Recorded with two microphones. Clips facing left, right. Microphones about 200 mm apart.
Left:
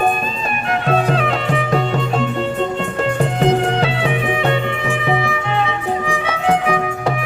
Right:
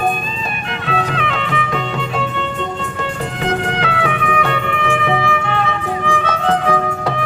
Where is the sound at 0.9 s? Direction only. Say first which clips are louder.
Left 3 dB; 40° left (ahead or behind).